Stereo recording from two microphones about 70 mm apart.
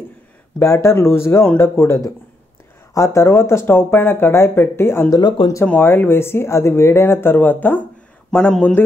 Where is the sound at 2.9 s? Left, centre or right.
Left.